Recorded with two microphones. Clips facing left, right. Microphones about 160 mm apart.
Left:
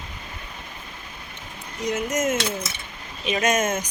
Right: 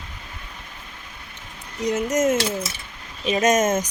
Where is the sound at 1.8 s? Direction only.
40° right (ahead or behind).